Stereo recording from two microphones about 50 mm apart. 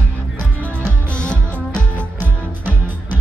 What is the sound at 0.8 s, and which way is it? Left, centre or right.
Music, centre.